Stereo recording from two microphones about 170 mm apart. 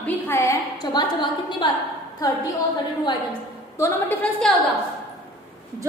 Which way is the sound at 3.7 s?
15° left (ahead or behind).